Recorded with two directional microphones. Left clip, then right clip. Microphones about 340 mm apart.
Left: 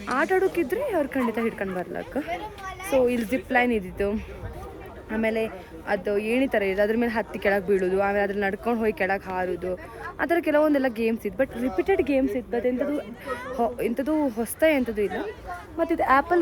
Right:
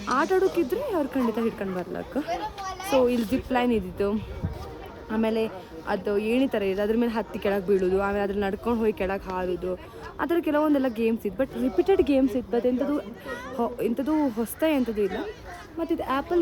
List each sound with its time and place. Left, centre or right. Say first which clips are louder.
0.2 s speech: left 1 dB; centre
15.0 s speech: even; left
15.9 s speech: left 6 dB; centre